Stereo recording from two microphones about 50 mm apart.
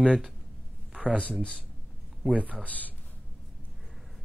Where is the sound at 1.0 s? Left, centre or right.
Right.